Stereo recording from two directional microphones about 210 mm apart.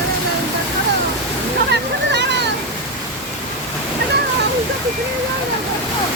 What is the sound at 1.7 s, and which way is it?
Waterfall, 55° right (ahead or behind).